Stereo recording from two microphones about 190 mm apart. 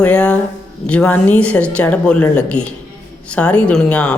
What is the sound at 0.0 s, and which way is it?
Speech, 5° left (ahead or behind).